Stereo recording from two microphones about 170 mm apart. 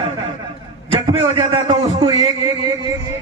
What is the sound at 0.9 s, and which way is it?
A man's voice, 30° right (ahead or behind).